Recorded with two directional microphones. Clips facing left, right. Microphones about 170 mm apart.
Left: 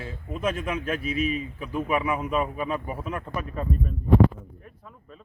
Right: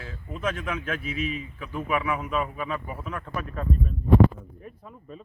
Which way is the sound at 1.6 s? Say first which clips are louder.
Left 1 dB; 10° left (ahead or behind).